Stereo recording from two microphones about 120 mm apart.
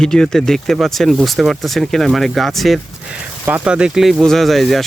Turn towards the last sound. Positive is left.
turn(degrees=0)  # may be behind; listen again after turning